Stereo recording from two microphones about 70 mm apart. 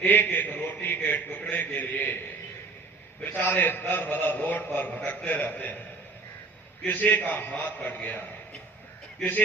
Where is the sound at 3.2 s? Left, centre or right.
Left.